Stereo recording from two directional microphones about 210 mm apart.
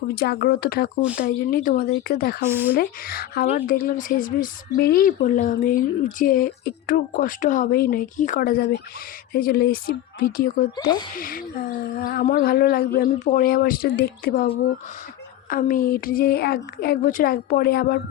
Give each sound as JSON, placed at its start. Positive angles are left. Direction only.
{"t": 0.1, "sound": "speech", "side_deg": 50}
{"t": 2.5, "sound": "speech", "side_deg": -10}
{"t": 2.7, "sound": "speech", "side_deg": 45}
{"t": 10.8, "sound": "speech", "side_deg": 20}
{"t": 11.2, "sound": "speech", "side_deg": 40}